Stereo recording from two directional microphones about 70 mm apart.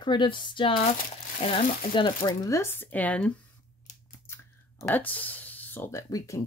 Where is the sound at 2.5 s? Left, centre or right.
Left.